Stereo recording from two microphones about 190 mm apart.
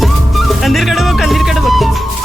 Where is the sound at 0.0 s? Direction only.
Centre (ahead or behind).